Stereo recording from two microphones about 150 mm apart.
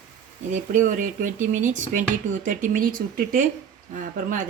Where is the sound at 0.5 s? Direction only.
60° right (ahead or behind).